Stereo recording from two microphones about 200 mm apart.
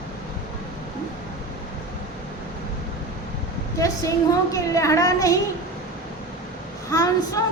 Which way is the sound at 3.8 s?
15° left (ahead or behind).